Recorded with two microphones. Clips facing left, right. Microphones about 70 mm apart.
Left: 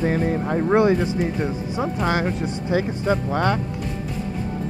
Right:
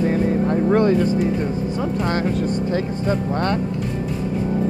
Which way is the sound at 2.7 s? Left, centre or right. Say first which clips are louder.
Even; centre.